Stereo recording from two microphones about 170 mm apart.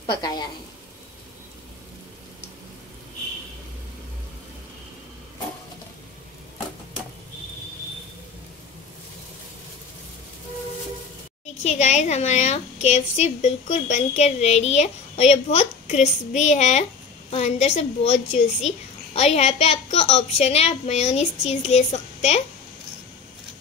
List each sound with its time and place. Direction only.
0.0 s a woman's voice: 25° left (ahead or behind)
11.6 s a woman's voice: 45° left (ahead or behind)